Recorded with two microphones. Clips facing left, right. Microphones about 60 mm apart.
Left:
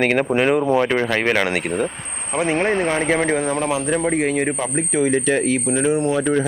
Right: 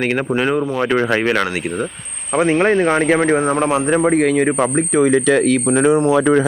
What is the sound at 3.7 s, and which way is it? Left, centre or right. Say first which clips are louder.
Speech: right 4 dB; right.